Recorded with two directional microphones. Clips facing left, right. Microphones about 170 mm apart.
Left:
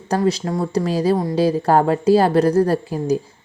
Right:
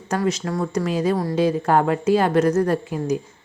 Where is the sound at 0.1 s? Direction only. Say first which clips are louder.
Left 3 dB; 35° left (ahead or behind).